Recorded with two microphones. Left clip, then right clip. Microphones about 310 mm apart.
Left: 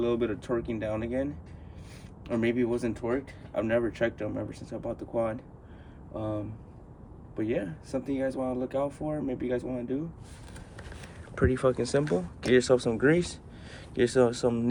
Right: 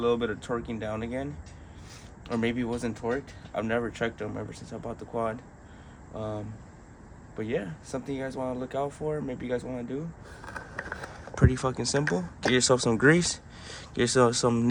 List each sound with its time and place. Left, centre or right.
0.0 s speech: centre
7.3 s speech: centre
10.9 s a sound: right
11.3 s speech: centre